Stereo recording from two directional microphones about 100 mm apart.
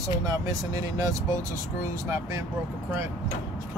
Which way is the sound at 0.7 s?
35° right (ahead or behind).